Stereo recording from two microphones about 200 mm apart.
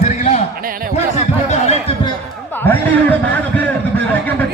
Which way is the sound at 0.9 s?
35° left (ahead or behind).